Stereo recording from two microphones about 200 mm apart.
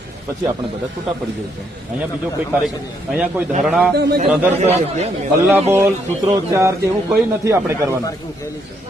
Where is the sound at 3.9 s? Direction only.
55° right (ahead or behind).